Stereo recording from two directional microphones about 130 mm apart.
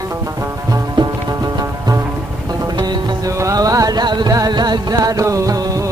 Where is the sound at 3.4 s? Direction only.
25° right (ahead or behind).